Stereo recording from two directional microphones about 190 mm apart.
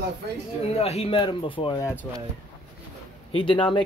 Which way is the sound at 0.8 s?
30° left (ahead or behind).